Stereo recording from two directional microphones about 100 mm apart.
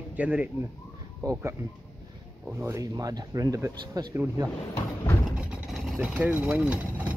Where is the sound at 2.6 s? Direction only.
35° right (ahead or behind).